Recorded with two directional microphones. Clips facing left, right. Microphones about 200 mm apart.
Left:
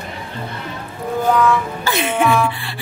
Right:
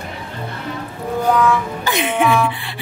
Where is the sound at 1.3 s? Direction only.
Centre (ahead or behind).